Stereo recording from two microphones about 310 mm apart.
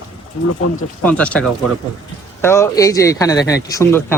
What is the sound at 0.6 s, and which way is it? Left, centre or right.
Speech, left.